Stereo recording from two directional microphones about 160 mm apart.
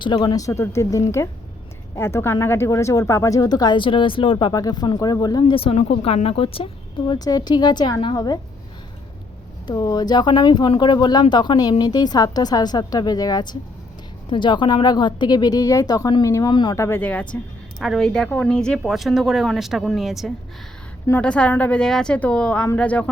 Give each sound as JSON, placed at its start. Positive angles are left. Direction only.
{"t": 0.0, "sound": "a woman's voice", "side_deg": 30}
{"t": 7.1, "sound": "speech", "side_deg": 25}
{"t": 9.6, "sound": "speech", "side_deg": 25}
{"t": 16.7, "sound": "a woman's voice", "side_deg": 15}